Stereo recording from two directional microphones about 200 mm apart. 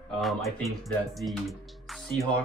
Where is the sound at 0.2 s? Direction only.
Centre (ahead or behind).